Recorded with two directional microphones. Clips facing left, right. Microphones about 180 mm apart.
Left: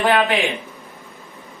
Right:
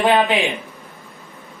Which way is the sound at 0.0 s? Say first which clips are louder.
Right 1 dB; 15° right (ahead or behind).